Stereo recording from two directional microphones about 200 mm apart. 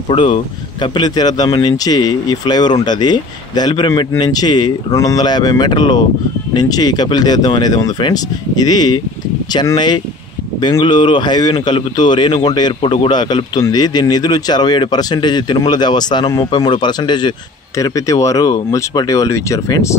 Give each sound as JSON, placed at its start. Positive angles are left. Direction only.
{"t": 0.1, "sound": "a man's voice", "side_deg": 25}